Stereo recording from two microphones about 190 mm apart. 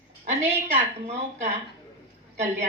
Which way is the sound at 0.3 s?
35° right (ahead or behind).